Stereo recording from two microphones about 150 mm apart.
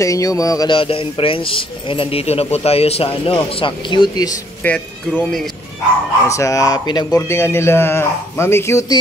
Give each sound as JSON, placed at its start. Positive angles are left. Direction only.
{"t": 0.0, "sound": "speech", "side_deg": 20}
{"t": 0.7, "sound": "speech", "side_deg": 35}
{"t": 4.6, "sound": "speech", "side_deg": 10}
{"t": 6.2, "sound": "speech", "side_deg": 20}